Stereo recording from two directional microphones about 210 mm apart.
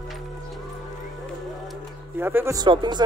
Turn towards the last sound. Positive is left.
turn(degrees=-20)  # may be behind; listen again after turning